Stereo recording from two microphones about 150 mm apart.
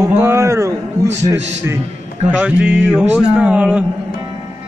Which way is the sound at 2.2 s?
10° right (ahead or behind).